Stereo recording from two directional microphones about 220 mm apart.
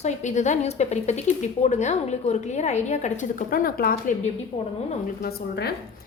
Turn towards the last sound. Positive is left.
turn(degrees=45)  # may be behind; listen again after turning